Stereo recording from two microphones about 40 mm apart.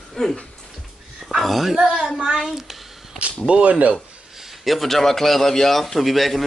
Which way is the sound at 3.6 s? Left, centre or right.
Right.